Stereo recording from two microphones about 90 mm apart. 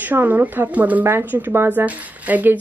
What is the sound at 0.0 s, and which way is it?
A woman's voice, 20° right (ahead or behind).